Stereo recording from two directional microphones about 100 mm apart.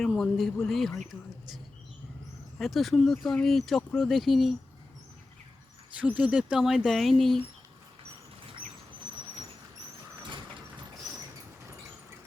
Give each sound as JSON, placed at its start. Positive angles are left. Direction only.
{"t": 0.0, "sound": "speech", "side_deg": 0}
{"t": 2.6, "sound": "speech", "side_deg": 0}
{"t": 6.0, "sound": "speech", "side_deg": -15}
{"t": 10.2, "sound": "vehicle", "side_deg": -50}